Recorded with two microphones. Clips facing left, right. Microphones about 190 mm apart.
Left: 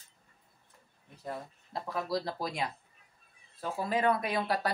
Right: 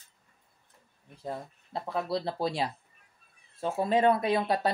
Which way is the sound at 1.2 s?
25° right (ahead or behind).